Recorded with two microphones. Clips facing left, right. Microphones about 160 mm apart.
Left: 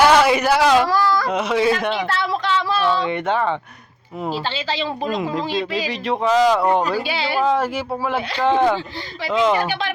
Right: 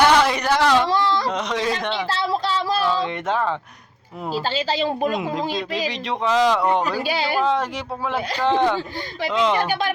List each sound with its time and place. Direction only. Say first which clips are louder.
0.0 s a sound: left 3 dB; 5° left (ahead or behind)
0.9 s a sound: left 2 dB; 25° right (ahead or behind)
1.3 s speech: left 5 dB; 5° left (ahead or behind)
2.0 s a sound: left 1 dB; 30° right (ahead or behind)
3.1 s speech: left 3 dB; centre (ahead or behind)
4.5 s speech: right 2 dB; 45° right (ahead or behind)
5.1 s speech: left 2 dB; centre (ahead or behind)
7.1 s speech: right 1 dB; 45° right (ahead or behind)
7.4 s speech: left 3 dB; 5° left (ahead or behind)